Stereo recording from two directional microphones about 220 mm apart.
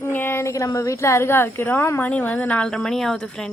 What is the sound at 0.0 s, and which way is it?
Speech, 10° left (ahead or behind).